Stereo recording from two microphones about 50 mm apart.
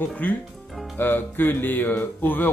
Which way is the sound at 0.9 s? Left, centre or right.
Left.